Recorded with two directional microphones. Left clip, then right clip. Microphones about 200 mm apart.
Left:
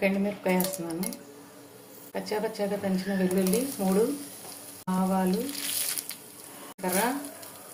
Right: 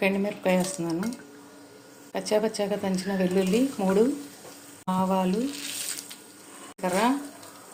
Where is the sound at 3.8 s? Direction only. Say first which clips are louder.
Right 3 dB; 45° right (ahead or behind).